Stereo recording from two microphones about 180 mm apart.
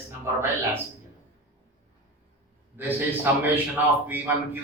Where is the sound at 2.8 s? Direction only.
10° right (ahead or behind).